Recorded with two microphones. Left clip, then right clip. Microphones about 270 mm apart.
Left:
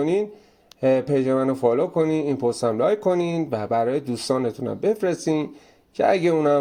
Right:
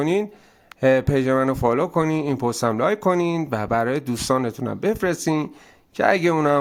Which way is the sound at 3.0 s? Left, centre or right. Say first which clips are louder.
Right 1 dB; right.